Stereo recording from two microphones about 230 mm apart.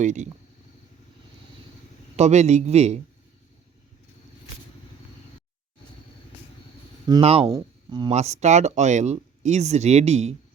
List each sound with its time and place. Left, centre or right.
0.0 s speech: right
2.1 s speech: right
7.1 s speech: right
7.4 s speech: centre